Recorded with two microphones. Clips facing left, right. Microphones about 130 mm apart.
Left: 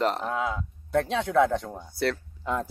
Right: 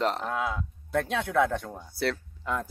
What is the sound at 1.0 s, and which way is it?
Speech, 20° left (ahead or behind).